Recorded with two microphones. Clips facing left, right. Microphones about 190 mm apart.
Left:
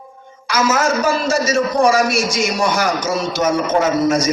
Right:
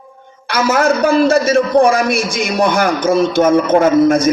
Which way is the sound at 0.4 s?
60° right (ahead or behind).